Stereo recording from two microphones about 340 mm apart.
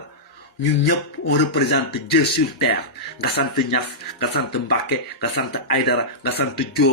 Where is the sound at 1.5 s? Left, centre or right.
Left.